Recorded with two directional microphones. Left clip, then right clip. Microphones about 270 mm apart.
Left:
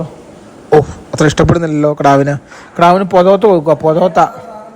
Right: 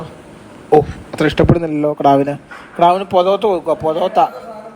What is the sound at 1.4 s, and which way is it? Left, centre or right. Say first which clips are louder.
Speech: left 3 dB; right.